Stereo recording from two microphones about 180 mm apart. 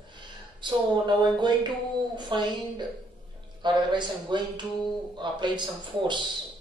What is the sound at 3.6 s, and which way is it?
Speech, 25° right (ahead or behind).